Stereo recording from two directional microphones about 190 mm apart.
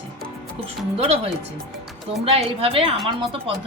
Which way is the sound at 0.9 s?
30° right (ahead or behind).